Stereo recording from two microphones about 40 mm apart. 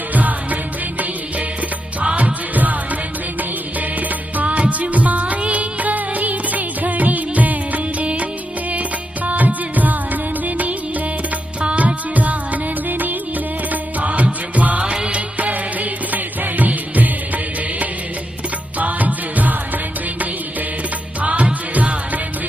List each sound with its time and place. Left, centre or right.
0.1 s music: right
4.4 s music: right
11.6 s music: right
12.1 s music: right
13.7 s music: right